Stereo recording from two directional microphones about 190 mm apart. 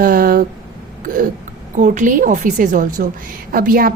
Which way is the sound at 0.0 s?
50° right (ahead or behind).